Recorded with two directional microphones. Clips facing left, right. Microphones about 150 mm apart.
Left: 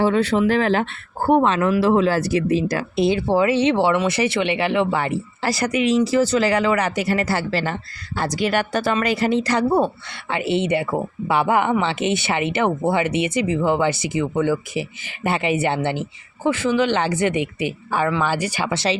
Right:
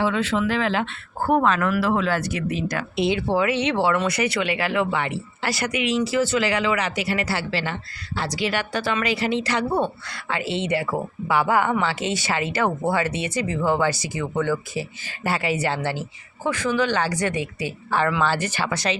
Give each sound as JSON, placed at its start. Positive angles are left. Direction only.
{"t": 0.0, "sound": "speech", "side_deg": 40}
{"t": 1.2, "sound": "speech", "side_deg": 30}
{"t": 18.7, "sound": "speech", "side_deg": 25}